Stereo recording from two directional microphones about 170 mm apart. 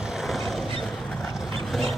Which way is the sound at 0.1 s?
Centre (ahead or behind).